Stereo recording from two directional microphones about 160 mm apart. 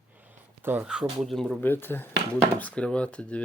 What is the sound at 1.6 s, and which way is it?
Speech, 10° left (ahead or behind).